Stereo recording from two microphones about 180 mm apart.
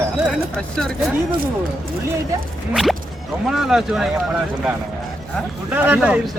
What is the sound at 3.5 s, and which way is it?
Speech, centre (ahead or behind).